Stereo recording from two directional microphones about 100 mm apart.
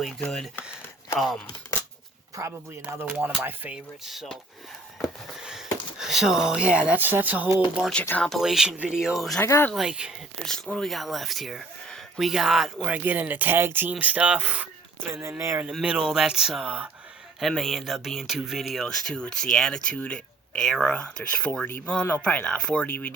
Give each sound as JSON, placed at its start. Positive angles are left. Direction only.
{"t": 0.0, "sound": "speech", "side_deg": 5}
{"t": 2.4, "sound": "speech", "side_deg": -35}
{"t": 2.9, "sound": "speech", "side_deg": -20}
{"t": 4.0, "sound": "speech", "side_deg": -5}
{"t": 8.4, "sound": "speech", "side_deg": -5}
{"t": 9.4, "sound": "speech", "side_deg": 25}
{"t": 9.7, "sound": "speech", "side_deg": -5}
{"t": 10.4, "sound": "speech", "side_deg": 5}
{"t": 12.9, "sound": "speech", "side_deg": -20}
{"t": 15.1, "sound": "speech", "side_deg": -25}
{"t": 15.8, "sound": "speech", "side_deg": -10}
{"t": 17.4, "sound": "speech", "side_deg": 0}